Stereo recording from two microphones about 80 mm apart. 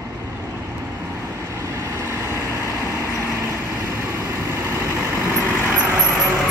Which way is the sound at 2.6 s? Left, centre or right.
Left.